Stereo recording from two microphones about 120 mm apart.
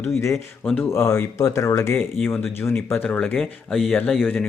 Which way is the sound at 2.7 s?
10° left (ahead or behind).